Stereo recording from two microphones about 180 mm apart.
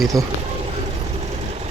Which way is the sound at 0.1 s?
20° right (ahead or behind).